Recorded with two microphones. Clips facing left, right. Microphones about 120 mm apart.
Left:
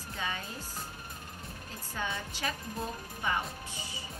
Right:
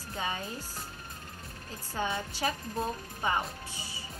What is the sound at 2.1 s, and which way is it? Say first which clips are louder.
Speech: right 4 dB; 25° right (ahead or behind).